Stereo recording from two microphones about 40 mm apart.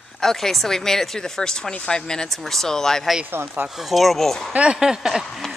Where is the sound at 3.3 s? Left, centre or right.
Right.